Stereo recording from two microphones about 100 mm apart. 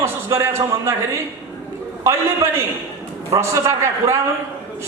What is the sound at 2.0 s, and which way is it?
A man's voice, 25° right (ahead or behind).